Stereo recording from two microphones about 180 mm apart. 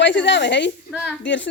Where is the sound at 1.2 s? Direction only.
90° left.